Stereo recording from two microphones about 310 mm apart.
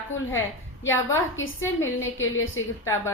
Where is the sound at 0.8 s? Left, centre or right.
Centre.